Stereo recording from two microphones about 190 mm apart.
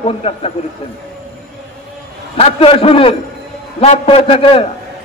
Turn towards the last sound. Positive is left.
turn(degrees=30)  # may be behind; listen again after turning